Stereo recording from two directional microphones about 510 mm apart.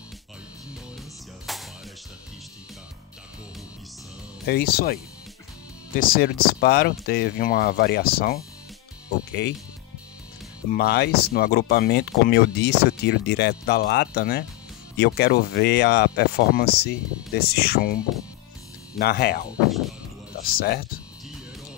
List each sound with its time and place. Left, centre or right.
1.4 s music: centre
4.5 s speech: centre
5.9 s speech: centre
10.7 s speech: centre
18.9 s speech: centre
20.4 s speech: centre